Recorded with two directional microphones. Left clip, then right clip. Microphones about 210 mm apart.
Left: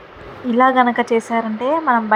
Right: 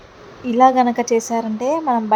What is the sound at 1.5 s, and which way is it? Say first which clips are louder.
Speech: left 1 dB; 20° left (ahead or behind).